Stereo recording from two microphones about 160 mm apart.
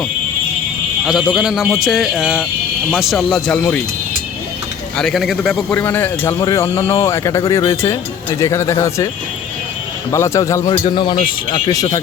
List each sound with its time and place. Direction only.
1.0 s speech: centre (ahead or behind)
4.9 s speech: centre (ahead or behind)
5.7 s speech: 10° left (ahead or behind)
10.1 s speech: 20° left (ahead or behind)
10.7 s speech: 30° left (ahead or behind)